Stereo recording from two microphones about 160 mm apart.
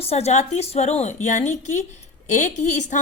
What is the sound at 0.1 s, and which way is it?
A woman's voice, 40° left (ahead or behind).